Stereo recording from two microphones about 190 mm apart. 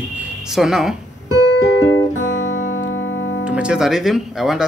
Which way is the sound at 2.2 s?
85° left.